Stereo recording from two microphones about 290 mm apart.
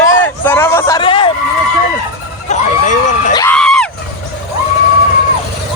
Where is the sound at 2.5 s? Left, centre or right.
Left.